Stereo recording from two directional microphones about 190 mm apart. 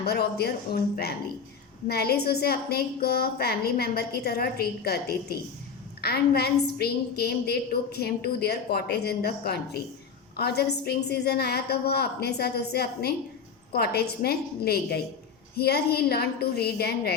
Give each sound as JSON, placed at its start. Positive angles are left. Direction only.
{"t": 0.0, "sound": "a woman's voice", "side_deg": 55}